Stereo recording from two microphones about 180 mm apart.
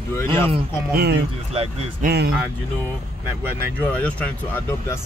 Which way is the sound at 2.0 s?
60° right (ahead or behind).